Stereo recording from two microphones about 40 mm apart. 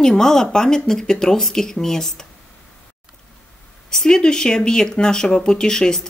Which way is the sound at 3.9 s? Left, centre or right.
Centre.